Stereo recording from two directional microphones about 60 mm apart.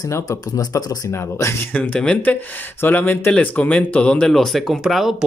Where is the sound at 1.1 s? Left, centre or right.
Left.